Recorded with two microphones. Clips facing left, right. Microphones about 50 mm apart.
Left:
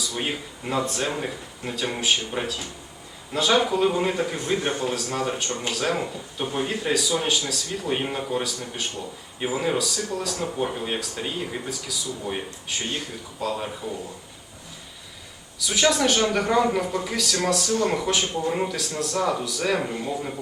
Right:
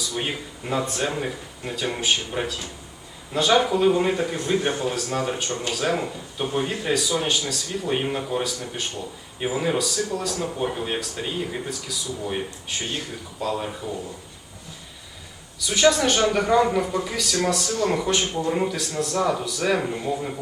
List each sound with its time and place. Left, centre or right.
0.2 s speech: centre
15.6 s speech: centre